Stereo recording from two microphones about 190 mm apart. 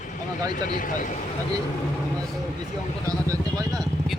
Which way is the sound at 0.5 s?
45° left (ahead or behind).